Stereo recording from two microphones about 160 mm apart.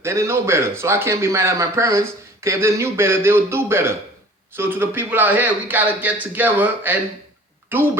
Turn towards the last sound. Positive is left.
turn(degrees=-15)  # may be behind; listen again after turning